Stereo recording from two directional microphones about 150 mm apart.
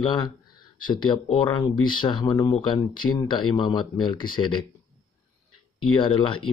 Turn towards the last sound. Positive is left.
turn(degrees=35)  # may be behind; listen again after turning